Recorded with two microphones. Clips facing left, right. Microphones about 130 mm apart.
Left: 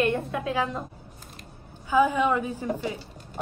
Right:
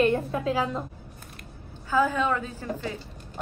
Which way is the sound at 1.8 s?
15° left (ahead or behind).